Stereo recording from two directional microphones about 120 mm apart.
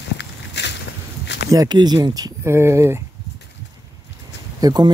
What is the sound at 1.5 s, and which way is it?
Speech, 35° right (ahead or behind).